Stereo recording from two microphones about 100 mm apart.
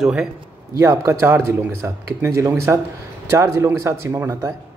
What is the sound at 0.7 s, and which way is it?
Speech, 30° right (ahead or behind).